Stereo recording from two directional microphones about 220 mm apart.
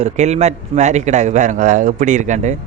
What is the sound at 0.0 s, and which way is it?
Speech, 30° right (ahead or behind).